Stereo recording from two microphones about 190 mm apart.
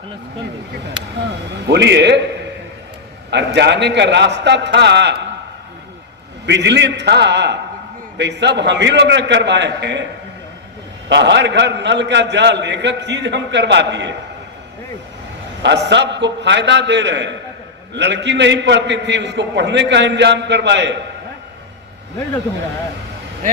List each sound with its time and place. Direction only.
1.6 s a man's voice: 65° right (ahead or behind)
3.2 s a man's voice: 65° right (ahead or behind)
6.4 s a man's voice: 65° right (ahead or behind)
11.1 s a man's voice: 65° right (ahead or behind)
15.6 s a man's voice: 65° right (ahead or behind)